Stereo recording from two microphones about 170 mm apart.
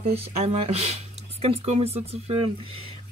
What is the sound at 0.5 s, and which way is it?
Speech, 35° right (ahead or behind).